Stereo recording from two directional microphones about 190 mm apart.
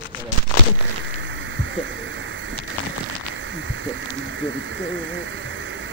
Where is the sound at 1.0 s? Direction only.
80° right.